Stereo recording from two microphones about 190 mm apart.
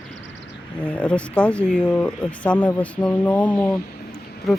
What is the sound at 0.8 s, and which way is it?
Speech, 5° left (ahead or behind).